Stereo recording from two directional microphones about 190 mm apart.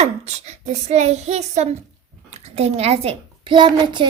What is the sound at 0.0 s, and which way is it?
A child's voice, 35° right (ahead or behind).